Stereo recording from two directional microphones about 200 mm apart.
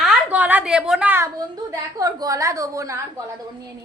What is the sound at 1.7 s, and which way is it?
A woman's voice, 15° right (ahead or behind).